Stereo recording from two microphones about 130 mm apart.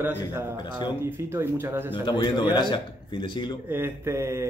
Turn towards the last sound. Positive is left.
turn(degrees=-20)  # may be behind; listen again after turning